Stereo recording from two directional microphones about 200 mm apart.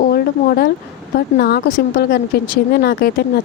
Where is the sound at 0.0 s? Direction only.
50° left (ahead or behind).